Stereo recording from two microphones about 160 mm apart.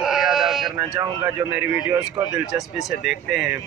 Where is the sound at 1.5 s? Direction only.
5° right (ahead or behind).